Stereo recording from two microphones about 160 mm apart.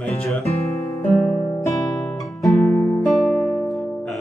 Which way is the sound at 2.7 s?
15° left (ahead or behind).